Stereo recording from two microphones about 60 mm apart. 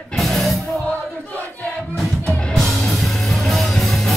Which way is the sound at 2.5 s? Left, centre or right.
Centre.